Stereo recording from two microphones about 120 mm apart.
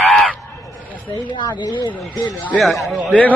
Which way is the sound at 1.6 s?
35° left (ahead or behind).